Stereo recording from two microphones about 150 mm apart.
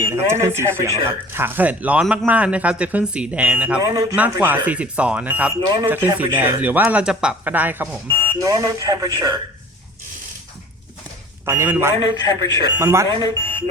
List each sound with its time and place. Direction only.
0.0 s speech: 15° right (ahead or behind)
3.8 s speech: 20° right (ahead or behind)
4.1 s speech: 10° right (ahead or behind)
8.0 s speech: 25° right (ahead or behind)
11.4 s speech: 15° right (ahead or behind)
12.3 s speech: 30° right (ahead or behind)